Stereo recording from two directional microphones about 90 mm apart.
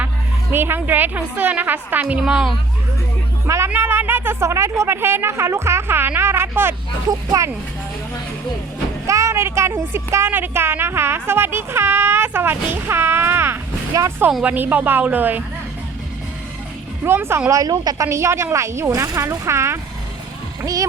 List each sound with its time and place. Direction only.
0.5 s a woman's voice: 25° right (ahead or behind); by 2.6 s 5° right (ahead or behind)
3.4 s a woman's voice: 35° right (ahead or behind)
7.1 s speech: 40° right (ahead or behind)
9.0 s a woman's voice: 35° right (ahead or behind)
13.9 s speech: 40° right (ahead or behind)
14.4 s a woman's voice: 20° right (ahead or behind)
17.0 s a woman's voice: 25° right (ahead or behind)
17.5 s speech: 40° right (ahead or behind)